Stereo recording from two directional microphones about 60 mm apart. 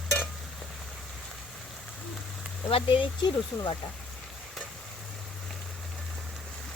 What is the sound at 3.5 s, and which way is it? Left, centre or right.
Speech, left.